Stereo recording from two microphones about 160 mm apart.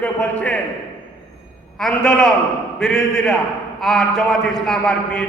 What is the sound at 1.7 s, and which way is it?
A man's voice, 5° left (ahead or behind).